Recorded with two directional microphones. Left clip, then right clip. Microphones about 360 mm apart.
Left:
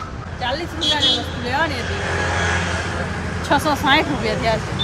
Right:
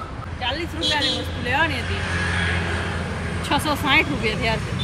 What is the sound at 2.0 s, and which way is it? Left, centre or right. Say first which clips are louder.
Speech: left 4 dB; centre.